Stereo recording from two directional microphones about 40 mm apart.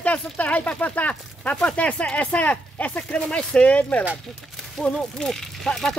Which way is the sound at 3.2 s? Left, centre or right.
Left.